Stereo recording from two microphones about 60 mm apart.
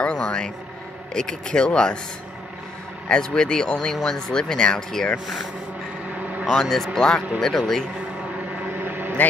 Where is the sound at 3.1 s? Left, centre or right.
Centre.